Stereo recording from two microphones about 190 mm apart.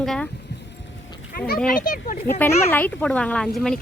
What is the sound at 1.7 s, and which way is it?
Speech, 45° left (ahead or behind).